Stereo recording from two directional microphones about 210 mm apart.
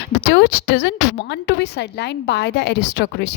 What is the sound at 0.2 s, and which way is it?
A woman's voice, 55° left (ahead or behind).